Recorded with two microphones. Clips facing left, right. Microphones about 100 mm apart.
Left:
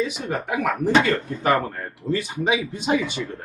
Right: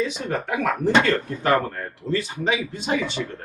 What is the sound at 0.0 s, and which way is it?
Speech, 10° left (ahead or behind).